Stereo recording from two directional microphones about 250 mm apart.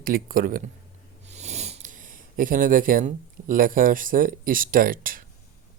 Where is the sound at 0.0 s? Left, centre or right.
Right.